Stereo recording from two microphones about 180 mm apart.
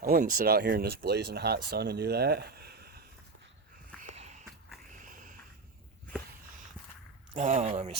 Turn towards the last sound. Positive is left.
turn(degrees=-35)  # may be behind; listen again after turning